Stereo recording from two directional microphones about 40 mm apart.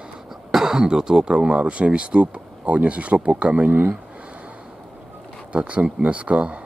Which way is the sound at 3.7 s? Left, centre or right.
Right.